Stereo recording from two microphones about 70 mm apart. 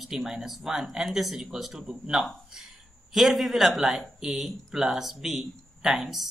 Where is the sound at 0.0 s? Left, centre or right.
Centre.